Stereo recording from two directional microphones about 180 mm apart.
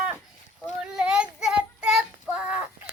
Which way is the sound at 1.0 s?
5° right (ahead or behind).